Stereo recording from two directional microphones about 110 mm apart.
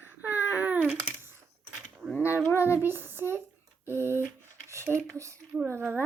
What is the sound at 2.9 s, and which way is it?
Speech, 20° right (ahead or behind).